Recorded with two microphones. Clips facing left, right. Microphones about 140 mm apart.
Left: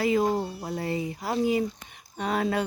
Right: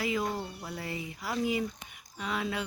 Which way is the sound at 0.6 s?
35° left (ahead or behind).